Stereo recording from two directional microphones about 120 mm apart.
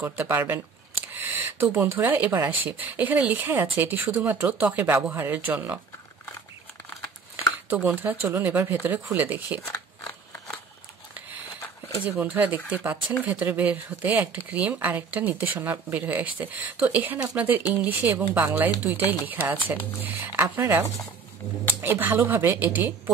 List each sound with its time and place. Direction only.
0.0 s speech: 20° right (ahead or behind)
7.7 s speech: 15° right (ahead or behind)
9.7 s scissors: 20° left (ahead or behind)
12.0 s speech: 15° right (ahead or behind)
21.8 s speech: 20° right (ahead or behind)